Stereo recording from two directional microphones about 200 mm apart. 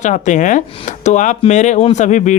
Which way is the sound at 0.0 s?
35° left (ahead or behind).